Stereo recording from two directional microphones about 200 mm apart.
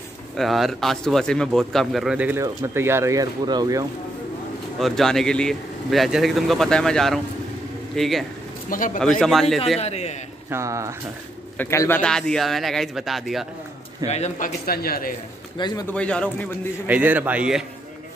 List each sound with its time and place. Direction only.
0.4 s speech: centre (ahead or behind); by 3.8 s 20° right (ahead or behind)
4.7 s speech: centre (ahead or behind)
8.6 s speech: 40° left (ahead or behind)
9.2 s speech: centre (ahead or behind)
9.8 s a man's voice: 30° left (ahead or behind)
10.5 s a man's voice: 15° right (ahead or behind)
11.5 s speech: 10° left (ahead or behind)
14.0 s speech: 35° left (ahead or behind)
14.7 s speech: 50° left (ahead or behind)
15.5 s a man's voice: 20° left (ahead or behind)
15.9 s speech: 5° left (ahead or behind)
16.8 s a man's voice: 10° right (ahead or behind)